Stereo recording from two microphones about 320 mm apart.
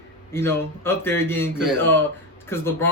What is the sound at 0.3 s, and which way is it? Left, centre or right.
A man's voice, centre.